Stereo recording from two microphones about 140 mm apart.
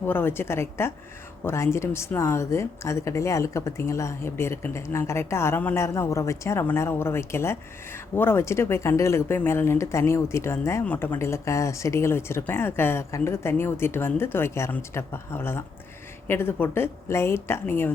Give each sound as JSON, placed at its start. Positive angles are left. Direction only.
{"t": 0.0, "sound": "a woman's voice", "side_deg": 15}